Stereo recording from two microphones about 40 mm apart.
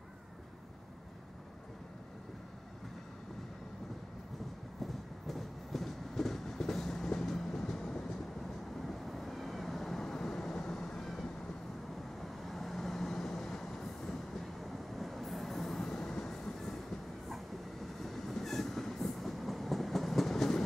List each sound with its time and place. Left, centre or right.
4.7 s train: centre
8.7 s vehicle: centre
12.2 s train: centre